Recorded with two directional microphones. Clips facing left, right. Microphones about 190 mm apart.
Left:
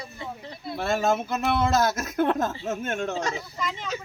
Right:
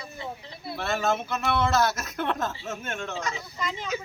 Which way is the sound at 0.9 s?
45° left (ahead or behind).